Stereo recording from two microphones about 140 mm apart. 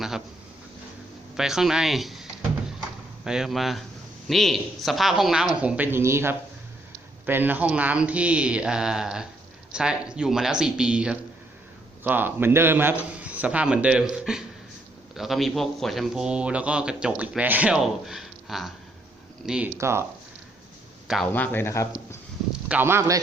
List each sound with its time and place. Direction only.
1.4 s speech: 5° right (ahead or behind)
3.2 s a man's voice: 5° right (ahead or behind)
19.8 s speech: 20° right (ahead or behind)
21.3 s speech: 15° left (ahead or behind)
22.7 s a man's voice: 15° right (ahead or behind)